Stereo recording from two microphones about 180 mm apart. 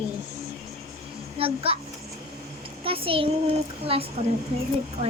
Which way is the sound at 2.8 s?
30° right (ahead or behind).